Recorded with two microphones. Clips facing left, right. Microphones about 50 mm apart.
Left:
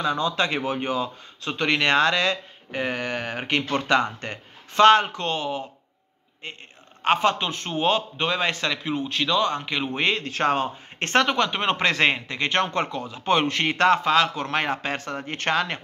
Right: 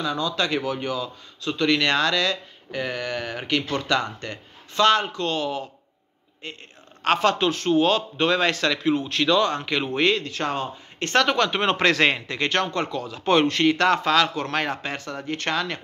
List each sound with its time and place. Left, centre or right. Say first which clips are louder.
0.0 s a man's voice: left 1 dB; left
10.1 s speech: left 3 dB; left
11.2 s a man's voice: right 1 dB; centre
13.2 s a man's voice: right 2 dB; centre
13.5 s speech: even; left